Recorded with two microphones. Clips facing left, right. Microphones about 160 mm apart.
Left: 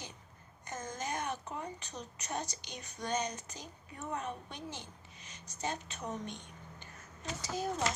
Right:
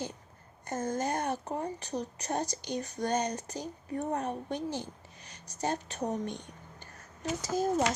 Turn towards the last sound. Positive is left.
turn(degrees=-40)  # may be behind; listen again after turning